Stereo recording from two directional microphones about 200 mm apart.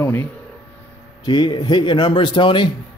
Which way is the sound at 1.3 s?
20° left (ahead or behind).